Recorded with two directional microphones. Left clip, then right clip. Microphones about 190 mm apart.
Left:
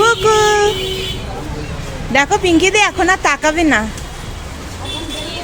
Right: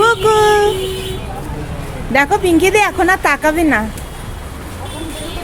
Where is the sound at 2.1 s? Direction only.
10° right (ahead or behind).